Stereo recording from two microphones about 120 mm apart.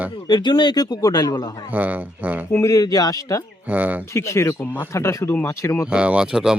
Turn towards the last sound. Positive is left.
turn(degrees=-5)  # may be behind; listen again after turning